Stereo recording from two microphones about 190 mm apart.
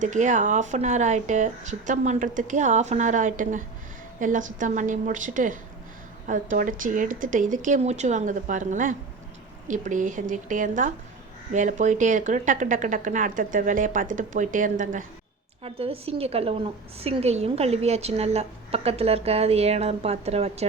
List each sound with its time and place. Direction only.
0.0 s a woman's voice: 40° right (ahead or behind)
15.6 s a woman's voice: 30° right (ahead or behind)